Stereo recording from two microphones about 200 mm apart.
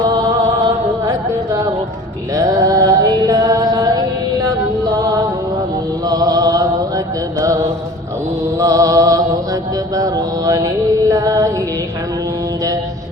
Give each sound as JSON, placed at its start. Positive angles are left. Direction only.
{"t": 0.0, "sound": "music", "side_deg": -20}
{"t": 2.3, "sound": "music", "side_deg": -15}
{"t": 8.5, "sound": "music", "side_deg": -15}
{"t": 9.9, "sound": "mantra", "side_deg": -20}
{"t": 11.1, "sound": "music", "side_deg": -15}